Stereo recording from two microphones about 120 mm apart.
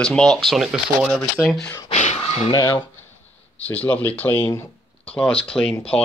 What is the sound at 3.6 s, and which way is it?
Speech, 10° left (ahead or behind).